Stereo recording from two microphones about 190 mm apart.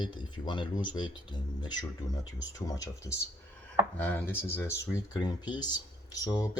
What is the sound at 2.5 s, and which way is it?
Speech, 20° left (ahead or behind).